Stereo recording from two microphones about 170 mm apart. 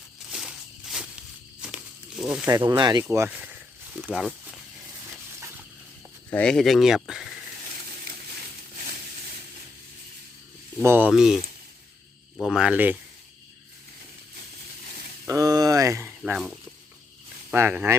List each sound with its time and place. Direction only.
0.3 s a sound: 5° right (ahead or behind)
2.5 s speech: 25° right (ahead or behind)
3.0 s speech: 15° right (ahead or behind)
6.3 s speech: 5° left (ahead or behind)
10.8 s speech: 10° right (ahead or behind)
12.4 s speech: 5° right (ahead or behind)
15.3 s speech: 20° right (ahead or behind)